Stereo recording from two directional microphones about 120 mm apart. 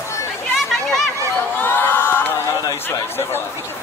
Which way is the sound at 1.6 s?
20° left (ahead or behind).